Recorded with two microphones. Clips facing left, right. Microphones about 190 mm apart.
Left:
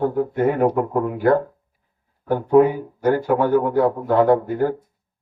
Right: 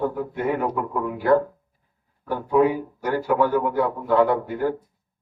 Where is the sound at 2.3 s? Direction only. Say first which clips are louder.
Left 4 dB; 50° left (ahead or behind).